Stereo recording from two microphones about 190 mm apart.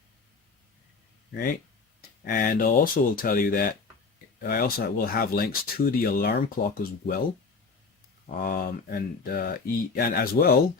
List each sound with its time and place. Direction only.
1.3 s speech: 50° left (ahead or behind)
8.3 s speech: 50° left (ahead or behind)